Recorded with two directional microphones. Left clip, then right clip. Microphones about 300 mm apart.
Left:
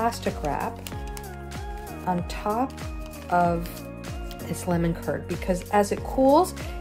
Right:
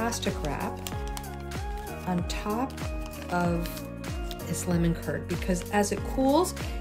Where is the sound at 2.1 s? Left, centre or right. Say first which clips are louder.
Left 6 dB; centre.